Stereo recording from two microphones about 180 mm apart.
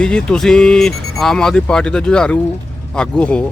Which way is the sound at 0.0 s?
5° left (ahead or behind).